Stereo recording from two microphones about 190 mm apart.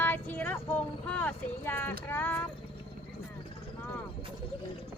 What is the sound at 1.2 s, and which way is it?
Speech, 10° left (ahead or behind).